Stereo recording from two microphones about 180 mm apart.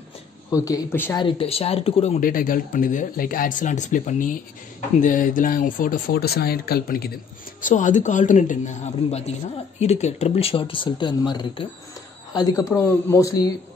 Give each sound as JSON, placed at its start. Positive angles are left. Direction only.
{"t": 0.5, "sound": "speech", "side_deg": 15}
{"t": 1.1, "sound": "speech", "side_deg": 30}
{"t": 2.1, "sound": "speech", "side_deg": 50}
{"t": 7.6, "sound": "speech", "side_deg": 45}